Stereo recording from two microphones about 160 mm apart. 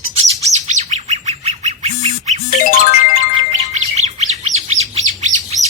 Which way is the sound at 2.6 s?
55° left (ahead or behind).